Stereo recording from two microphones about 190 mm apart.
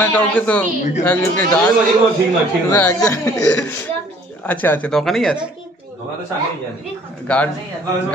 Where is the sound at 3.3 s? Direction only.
5° left (ahead or behind).